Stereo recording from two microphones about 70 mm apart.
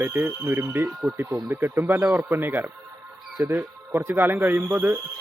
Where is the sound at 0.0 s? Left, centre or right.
Right.